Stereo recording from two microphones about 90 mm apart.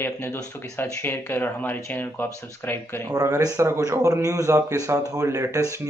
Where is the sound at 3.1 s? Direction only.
40° right (ahead or behind).